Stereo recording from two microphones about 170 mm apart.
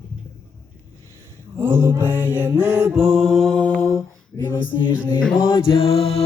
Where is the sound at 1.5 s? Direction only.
15° right (ahead or behind); by 4.6 s 20° left (ahead or behind).